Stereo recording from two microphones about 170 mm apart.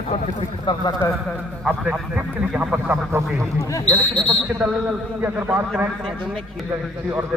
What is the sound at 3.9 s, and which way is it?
Speech, centre (ahead or behind).